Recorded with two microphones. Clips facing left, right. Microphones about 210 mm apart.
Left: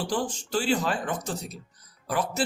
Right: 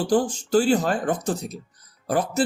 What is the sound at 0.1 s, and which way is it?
Speech, 45° right (ahead or behind).